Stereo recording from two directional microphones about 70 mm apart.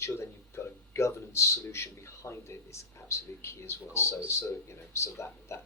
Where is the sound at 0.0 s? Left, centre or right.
Left.